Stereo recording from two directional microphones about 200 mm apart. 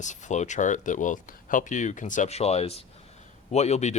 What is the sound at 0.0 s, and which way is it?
Speech, 35° left (ahead or behind).